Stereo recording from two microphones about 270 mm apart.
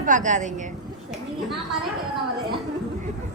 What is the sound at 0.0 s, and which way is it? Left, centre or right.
Speech, right.